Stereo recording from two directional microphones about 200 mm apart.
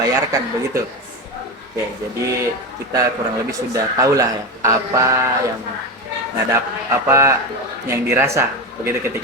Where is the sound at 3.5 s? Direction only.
15° right (ahead or behind).